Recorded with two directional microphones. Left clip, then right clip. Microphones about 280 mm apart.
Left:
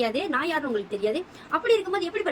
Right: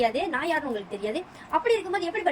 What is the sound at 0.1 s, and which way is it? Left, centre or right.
A woman's voice, centre.